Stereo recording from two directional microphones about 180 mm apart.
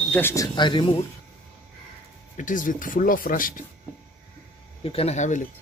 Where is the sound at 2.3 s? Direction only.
45° left (ahead or behind).